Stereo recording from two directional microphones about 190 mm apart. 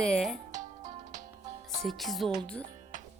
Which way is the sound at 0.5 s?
40° right (ahead or behind).